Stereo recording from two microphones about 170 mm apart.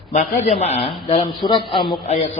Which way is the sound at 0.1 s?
45° left (ahead or behind).